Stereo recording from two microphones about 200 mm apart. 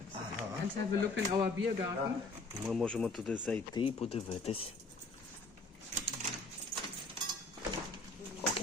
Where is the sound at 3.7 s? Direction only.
30° left (ahead or behind).